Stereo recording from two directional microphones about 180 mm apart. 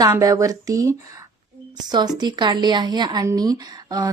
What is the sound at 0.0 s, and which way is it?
Speech, 20° right (ahead or behind).